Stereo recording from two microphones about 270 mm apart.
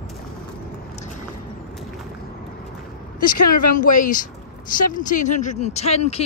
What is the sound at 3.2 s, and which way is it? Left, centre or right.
Speech, left.